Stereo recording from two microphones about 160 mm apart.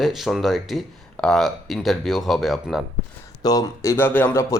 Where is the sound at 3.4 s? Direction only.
25° left (ahead or behind).